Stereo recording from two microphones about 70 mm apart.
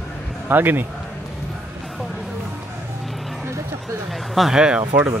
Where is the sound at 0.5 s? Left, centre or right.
Right.